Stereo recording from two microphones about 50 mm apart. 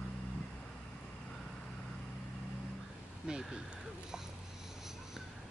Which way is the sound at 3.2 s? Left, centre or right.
Centre.